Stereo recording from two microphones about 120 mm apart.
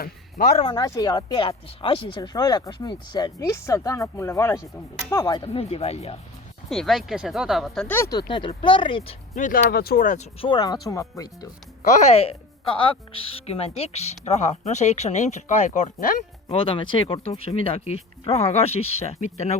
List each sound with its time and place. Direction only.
0.4 s a woman's voice: 75° left (ahead or behind)
0.7 s speech: 30° left (ahead or behind)
1.5 s speech: 45° left (ahead or behind)
2.3 s speech: 35° left (ahead or behind)
3.3 s speech: 25° left (ahead or behind)
5.4 s speech: 55° left (ahead or behind)
6.7 s speech: centre (ahead or behind)
7.9 s speech: 20° left (ahead or behind)
8.1 s speech: 40° left (ahead or behind)
9.4 s speech: 90° left
10.4 s speech: 35° left (ahead or behind)
11.9 s a woman's voice: 75° left (ahead or behind)
16.5 s speech: 45° left (ahead or behind); by 19.5 s 65° left (ahead or behind)